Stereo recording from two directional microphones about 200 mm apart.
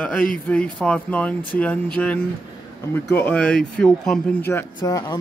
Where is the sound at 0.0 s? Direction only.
5° left (ahead or behind).